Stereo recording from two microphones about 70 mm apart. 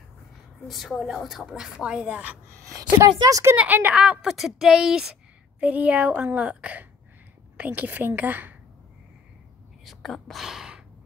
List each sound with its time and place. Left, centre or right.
0.7 s a woman's voice: centre
3.0 s speech: right
3.5 s a woman's voice: right
3.9 s a woman's voice: centre
5.6 s a woman's voice: right
9.8 s speech: centre
10.4 s gasp: centre